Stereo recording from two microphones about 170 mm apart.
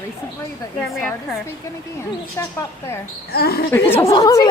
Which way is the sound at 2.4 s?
15° left (ahead or behind).